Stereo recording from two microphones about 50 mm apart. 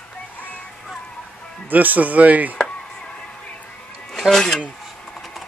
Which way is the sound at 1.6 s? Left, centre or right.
Right.